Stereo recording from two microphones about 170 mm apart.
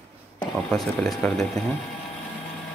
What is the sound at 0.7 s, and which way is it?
Speech, 5° left (ahead or behind).